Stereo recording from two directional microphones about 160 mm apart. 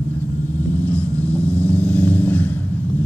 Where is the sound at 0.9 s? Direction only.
10° left (ahead or behind).